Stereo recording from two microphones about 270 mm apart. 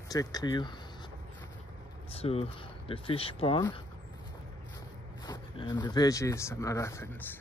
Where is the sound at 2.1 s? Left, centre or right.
Left.